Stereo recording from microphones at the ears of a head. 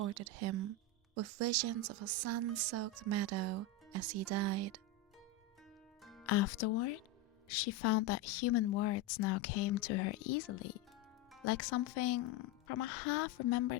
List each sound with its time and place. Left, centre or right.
0.0 s speech: right
6.2 s speech: left